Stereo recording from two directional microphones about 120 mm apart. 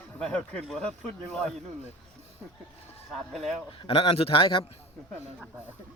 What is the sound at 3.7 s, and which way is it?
A man's voice, 50° left (ahead or behind).